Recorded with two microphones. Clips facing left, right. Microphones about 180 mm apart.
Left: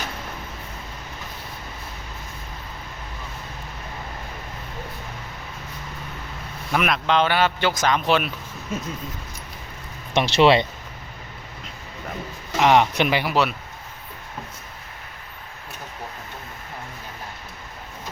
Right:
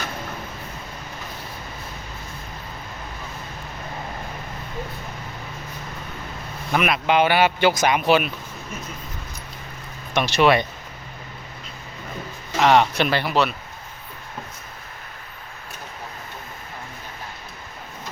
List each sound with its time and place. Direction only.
6.7 s a man's voice: 5° right (ahead or behind)
10.2 s speech: 25° left (ahead or behind)
12.5 s speech: 15° left (ahead or behind)